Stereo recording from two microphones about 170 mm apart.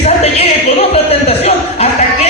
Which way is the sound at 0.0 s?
40° left (ahead or behind).